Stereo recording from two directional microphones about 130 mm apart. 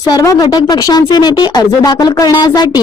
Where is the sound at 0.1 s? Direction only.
25° left (ahead or behind).